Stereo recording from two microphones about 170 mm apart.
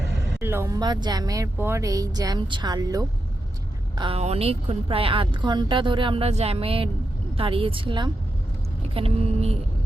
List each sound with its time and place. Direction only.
0.3 s a woman's voice: 15° right (ahead or behind); by 9.6 s 35° right (ahead or behind)